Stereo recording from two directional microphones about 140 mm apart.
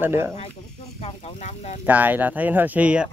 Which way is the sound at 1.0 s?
55° left (ahead or behind).